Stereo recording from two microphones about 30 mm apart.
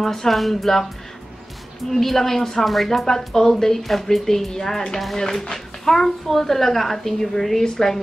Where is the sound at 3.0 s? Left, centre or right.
Centre.